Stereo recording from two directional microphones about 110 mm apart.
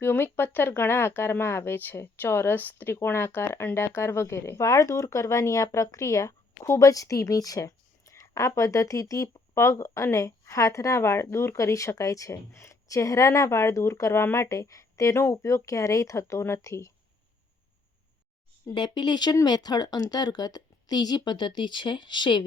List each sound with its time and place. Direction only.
0.0 s speech: 20° left (ahead or behind)
18.7 s speech: 45° left (ahead or behind)